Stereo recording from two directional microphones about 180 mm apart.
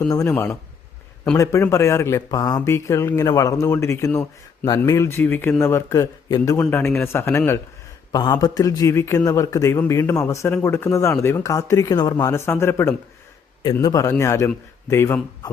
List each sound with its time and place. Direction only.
0.1 s a man's voice: 15° left (ahead or behind)